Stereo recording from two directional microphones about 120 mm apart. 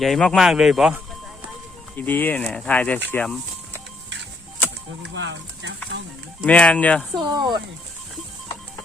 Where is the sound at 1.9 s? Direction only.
15° left (ahead or behind).